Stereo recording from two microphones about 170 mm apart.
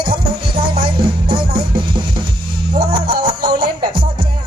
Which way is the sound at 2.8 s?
60° right (ahead or behind).